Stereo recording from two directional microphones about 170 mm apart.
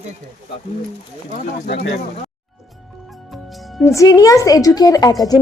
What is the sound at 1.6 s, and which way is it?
Speech, 65° left (ahead or behind).